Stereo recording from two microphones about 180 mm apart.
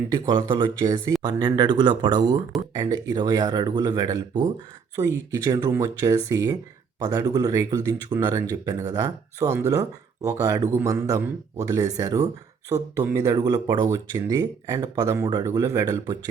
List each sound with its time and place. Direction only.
0.1 s speech: 25° right (ahead or behind)